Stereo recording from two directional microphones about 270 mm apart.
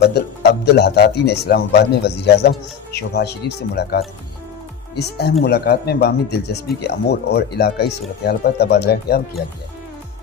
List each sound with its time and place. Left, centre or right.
0.0 s a man's voice: left